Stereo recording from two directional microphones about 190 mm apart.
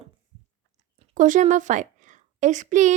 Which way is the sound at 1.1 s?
45° right (ahead or behind).